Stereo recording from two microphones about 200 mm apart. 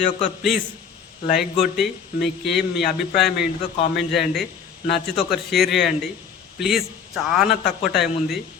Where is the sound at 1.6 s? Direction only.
Centre (ahead or behind).